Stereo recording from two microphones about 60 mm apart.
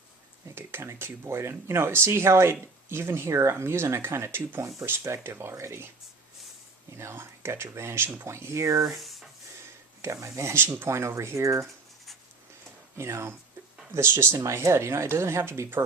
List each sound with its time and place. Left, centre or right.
0.5 s speech: right
6.9 s speech: right
9.0 s rub: centre
10.0 s speech: right
13.0 s speech: right
14.3 s speech: right